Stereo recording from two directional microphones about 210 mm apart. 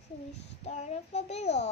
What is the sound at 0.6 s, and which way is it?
A child's voice, 30° left (ahead or behind).